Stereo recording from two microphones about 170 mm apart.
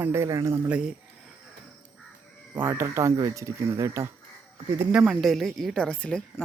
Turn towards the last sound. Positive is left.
turn(degrees=5)  # may be behind; listen again after turning